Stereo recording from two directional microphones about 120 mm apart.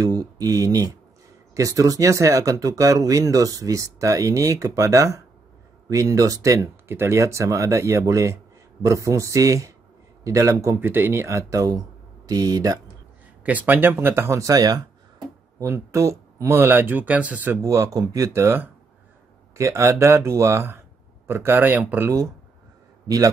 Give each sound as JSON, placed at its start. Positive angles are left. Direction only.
{"t": 0.0, "sound": "speech", "side_deg": -30}
{"t": 13.4, "sound": "a man's voice", "side_deg": -10}